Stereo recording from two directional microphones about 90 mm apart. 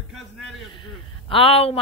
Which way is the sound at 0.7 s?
70° left (ahead or behind).